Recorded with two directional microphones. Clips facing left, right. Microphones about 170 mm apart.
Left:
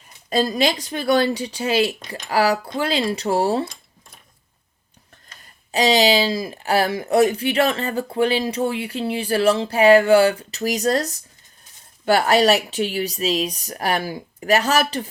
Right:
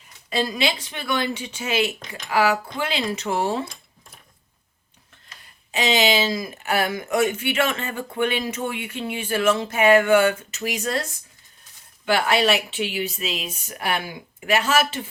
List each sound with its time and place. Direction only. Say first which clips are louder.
0.3 s speech: left 4 dB; 40° left (ahead or behind)
5.7 s speech: left 4 dB; 35° left (ahead or behind)